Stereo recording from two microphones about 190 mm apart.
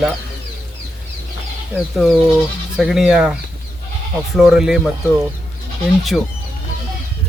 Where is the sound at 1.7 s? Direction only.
Centre (ahead or behind).